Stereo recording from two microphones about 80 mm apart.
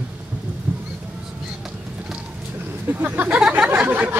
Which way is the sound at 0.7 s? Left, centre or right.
Right.